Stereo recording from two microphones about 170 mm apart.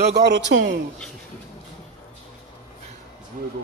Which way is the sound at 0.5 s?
90° right.